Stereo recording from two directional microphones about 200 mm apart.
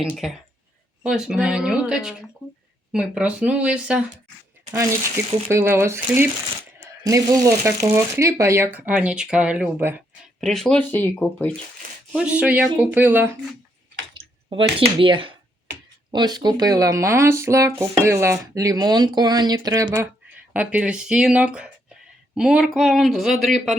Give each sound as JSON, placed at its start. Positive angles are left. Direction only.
{"t": 0.0, "sound": "speech", "side_deg": -5}
{"t": 12.1, "sound": "speech", "side_deg": -5}
{"t": 14.1, "sound": "speech", "side_deg": -25}
{"t": 20.5, "sound": "speech", "side_deg": -5}